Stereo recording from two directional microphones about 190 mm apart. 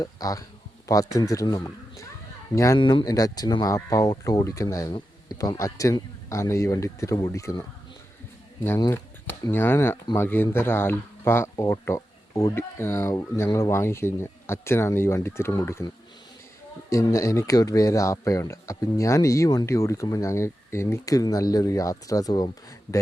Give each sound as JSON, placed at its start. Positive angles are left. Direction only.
{"t": 0.0, "sound": "speech", "side_deg": 20}
{"t": 8.6, "sound": "speech", "side_deg": 15}
{"t": 16.9, "sound": "speech", "side_deg": 15}